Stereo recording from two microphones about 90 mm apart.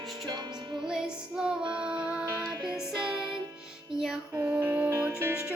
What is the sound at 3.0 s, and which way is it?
Music, 55° right (ahead or behind).